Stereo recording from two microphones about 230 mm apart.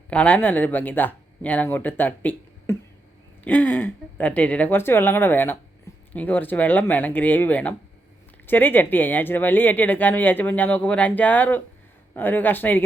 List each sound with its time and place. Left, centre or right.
0.1 s speech: centre